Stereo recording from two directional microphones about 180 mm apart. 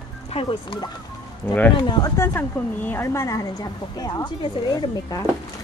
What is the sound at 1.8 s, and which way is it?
A woman's voice, 25° left (ahead or behind).